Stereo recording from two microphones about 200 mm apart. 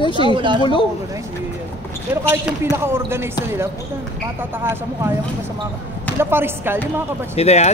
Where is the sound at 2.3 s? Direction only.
10° right (ahead or behind).